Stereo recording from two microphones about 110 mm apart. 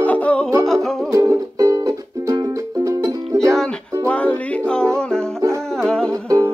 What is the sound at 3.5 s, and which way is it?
Music, 5° left (ahead or behind).